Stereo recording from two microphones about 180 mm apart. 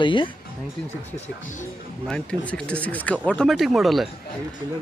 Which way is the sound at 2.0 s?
5° left (ahead or behind).